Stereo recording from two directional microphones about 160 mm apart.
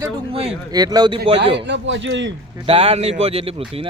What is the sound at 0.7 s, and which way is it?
Speech, 25° right (ahead or behind).